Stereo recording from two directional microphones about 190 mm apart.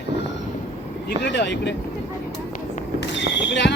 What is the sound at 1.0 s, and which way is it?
Speech, 65° left (ahead or behind).